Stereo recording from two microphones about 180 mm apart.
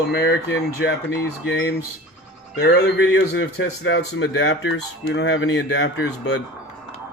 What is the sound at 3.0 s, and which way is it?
A man's voice, 90° left.